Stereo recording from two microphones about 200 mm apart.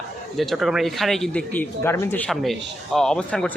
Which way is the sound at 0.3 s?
Centre (ahead or behind).